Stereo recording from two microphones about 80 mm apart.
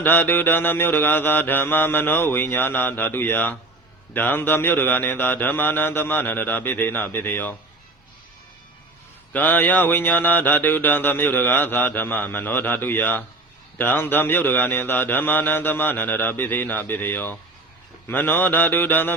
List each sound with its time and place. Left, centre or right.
0.0 s mantra: left
9.3 s mantra: left